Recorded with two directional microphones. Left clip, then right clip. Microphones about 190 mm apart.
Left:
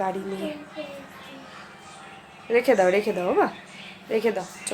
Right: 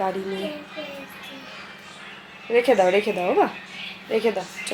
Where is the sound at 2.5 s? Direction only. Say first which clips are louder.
Right 2 dB; centre (ahead or behind).